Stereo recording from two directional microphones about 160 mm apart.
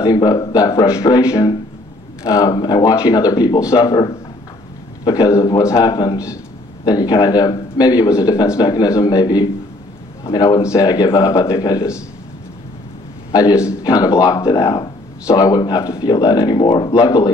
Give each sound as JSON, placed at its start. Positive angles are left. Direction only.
{"t": 0.0, "sound": "speech", "side_deg": 25}
{"t": 13.3, "sound": "a man's voice", "side_deg": 25}